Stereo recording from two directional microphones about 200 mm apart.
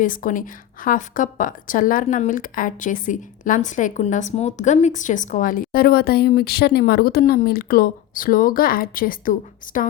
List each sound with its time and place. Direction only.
0.0 s a woman's voice: 40° left (ahead or behind)